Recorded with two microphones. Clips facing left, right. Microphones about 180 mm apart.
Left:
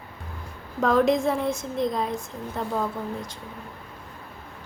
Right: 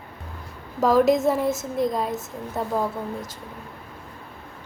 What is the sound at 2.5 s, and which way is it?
Speech, 5° right (ahead or behind).